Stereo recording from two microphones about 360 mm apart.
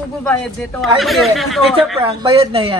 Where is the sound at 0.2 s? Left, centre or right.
Centre.